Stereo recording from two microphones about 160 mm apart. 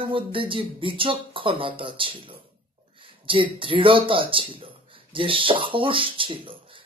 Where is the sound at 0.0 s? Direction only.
30° right (ahead or behind).